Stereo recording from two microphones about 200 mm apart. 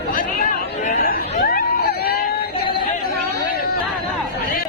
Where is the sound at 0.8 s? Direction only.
45° left (ahead or behind).